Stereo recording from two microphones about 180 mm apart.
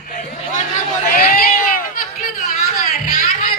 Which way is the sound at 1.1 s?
50° left (ahead or behind).